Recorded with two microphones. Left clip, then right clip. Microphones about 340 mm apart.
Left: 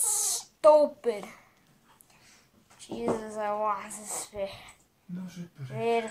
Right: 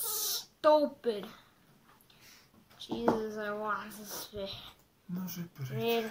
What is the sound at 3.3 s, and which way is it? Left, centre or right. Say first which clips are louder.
Speech: left 6 dB; centre.